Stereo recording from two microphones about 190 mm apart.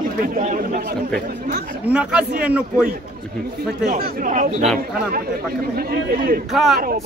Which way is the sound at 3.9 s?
45° right (ahead or behind).